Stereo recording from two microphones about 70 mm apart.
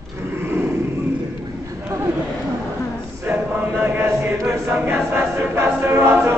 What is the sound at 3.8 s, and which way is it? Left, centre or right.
Chant, right.